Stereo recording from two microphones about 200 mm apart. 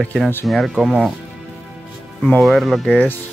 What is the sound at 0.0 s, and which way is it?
Speech, 5° left (ahead or behind).